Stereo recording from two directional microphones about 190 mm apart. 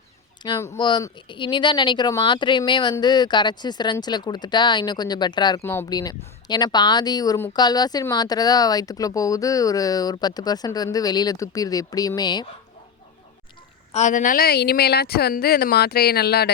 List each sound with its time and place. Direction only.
0.4 s speech: 20° left (ahead or behind)
13.9 s speech: 40° left (ahead or behind); by 16.5 s 55° left (ahead or behind)